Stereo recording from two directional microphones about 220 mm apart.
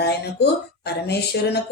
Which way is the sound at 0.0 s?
50° left (ahead or behind).